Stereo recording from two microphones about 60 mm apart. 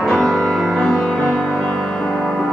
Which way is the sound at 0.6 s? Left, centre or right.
Centre.